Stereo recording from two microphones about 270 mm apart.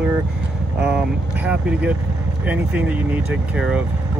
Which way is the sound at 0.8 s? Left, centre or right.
Centre.